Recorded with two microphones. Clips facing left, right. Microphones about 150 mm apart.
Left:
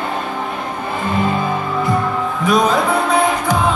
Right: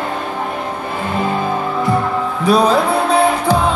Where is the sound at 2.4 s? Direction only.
35° right (ahead or behind).